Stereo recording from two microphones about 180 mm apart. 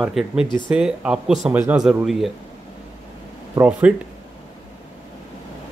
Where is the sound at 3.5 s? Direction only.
10° right (ahead or behind).